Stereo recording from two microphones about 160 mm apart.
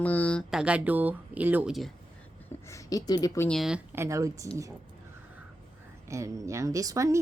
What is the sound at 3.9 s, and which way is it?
Speech, 15° right (ahead or behind).